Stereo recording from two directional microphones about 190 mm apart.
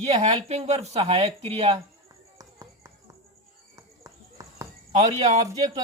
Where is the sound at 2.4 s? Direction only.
15° right (ahead or behind).